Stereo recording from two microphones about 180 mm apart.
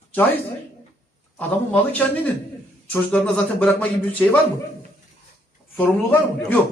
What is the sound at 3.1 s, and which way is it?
Speech, 5° left (ahead or behind).